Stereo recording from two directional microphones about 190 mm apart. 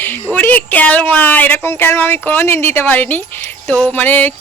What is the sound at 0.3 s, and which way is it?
Speech, 10° left (ahead or behind).